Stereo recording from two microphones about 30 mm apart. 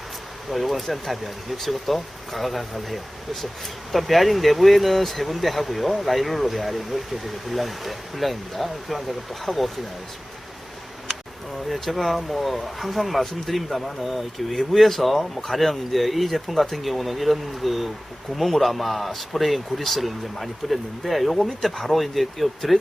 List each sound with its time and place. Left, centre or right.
0.5 s speech: centre
11.7 s speech: centre